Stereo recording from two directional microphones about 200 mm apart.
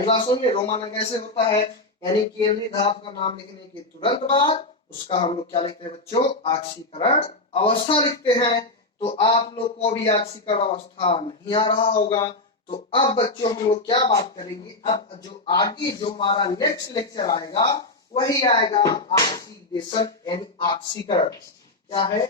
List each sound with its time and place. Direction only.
0.0 s speech: 25° left (ahead or behind)